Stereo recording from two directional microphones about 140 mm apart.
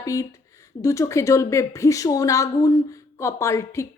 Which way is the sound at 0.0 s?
25° left (ahead or behind).